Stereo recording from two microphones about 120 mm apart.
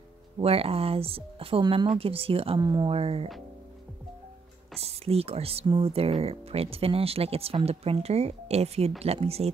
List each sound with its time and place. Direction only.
0.4 s speech: 55° right (ahead or behind)
4.8 s speech: 55° right (ahead or behind)